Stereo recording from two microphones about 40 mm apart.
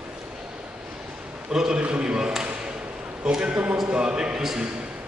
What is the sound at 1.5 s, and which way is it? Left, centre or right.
Speech, centre.